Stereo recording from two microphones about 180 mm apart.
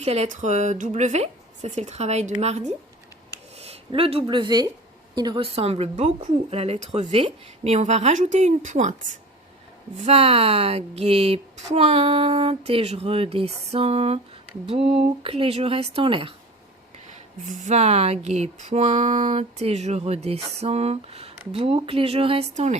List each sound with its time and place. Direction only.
0.0 s speech: 35° right (ahead or behind)
17.1 s speech: 40° right (ahead or behind)